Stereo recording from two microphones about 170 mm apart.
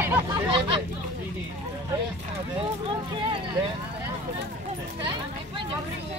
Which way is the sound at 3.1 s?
30° right (ahead or behind).